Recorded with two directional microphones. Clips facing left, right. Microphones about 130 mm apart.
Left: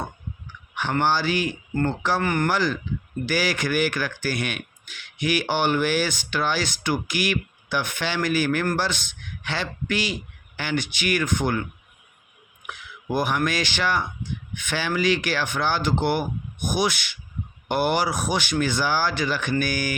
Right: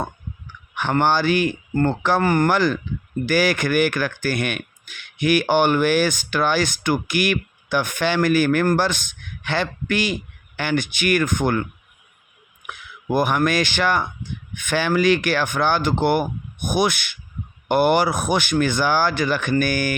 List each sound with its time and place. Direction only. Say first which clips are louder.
0.8 s a man's voice: right 4 dB; 55° right (ahead or behind)
2.2 s speech: right 7 dB; 35° right (ahead or behind)
2.5 s a man's voice: right 4 dB; 55° right (ahead or behind)
12.6 s speech: right 4 dB; 50° right (ahead or behind)